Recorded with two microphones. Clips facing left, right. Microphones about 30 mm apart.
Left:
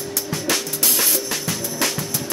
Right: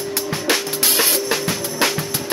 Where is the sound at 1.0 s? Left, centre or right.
Right.